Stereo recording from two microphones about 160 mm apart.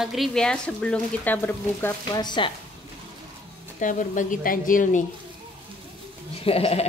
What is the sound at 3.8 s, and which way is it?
A woman's voice, 55° left (ahead or behind).